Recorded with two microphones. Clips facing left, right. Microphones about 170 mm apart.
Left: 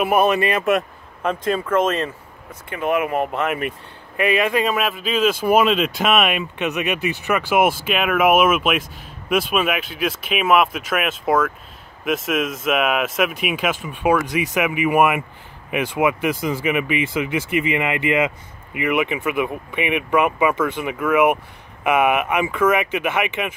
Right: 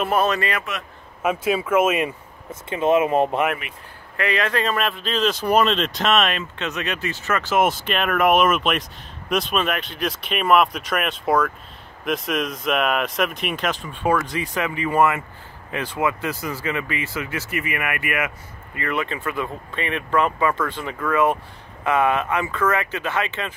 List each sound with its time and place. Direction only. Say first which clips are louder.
0.0 s speech: left 4 dB; 15° left (ahead or behind)
1.2 s speech: even; 5° right (ahead or behind)
2.7 s speech: right 3 dB; 20° right (ahead or behind)
4.2 s speech: left 4 dB; 15° left (ahead or behind)